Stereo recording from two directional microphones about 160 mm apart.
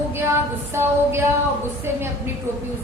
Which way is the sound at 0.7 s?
15° right (ahead or behind).